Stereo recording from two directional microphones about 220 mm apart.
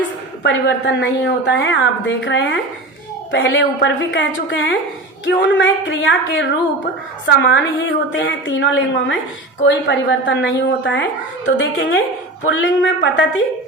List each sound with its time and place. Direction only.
0.4 s a woman's voice: 55° left (ahead or behind)